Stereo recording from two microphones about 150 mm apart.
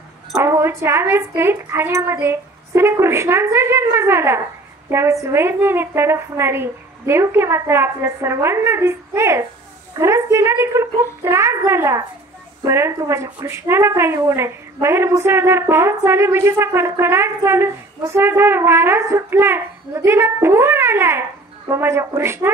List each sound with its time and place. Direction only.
0.3 s a woman's voice: 20° right (ahead or behind)